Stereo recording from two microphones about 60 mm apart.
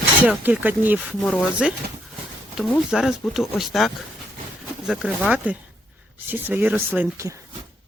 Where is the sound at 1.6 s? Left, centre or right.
Centre.